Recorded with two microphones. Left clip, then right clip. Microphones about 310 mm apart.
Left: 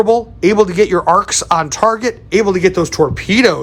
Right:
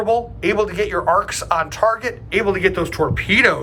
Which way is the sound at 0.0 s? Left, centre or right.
Centre.